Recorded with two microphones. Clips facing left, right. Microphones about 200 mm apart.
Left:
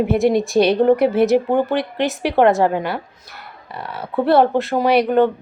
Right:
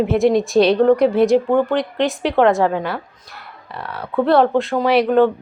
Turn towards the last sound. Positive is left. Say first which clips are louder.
# right 1 dB
turn(degrees=0)  # may be behind; listen again after turning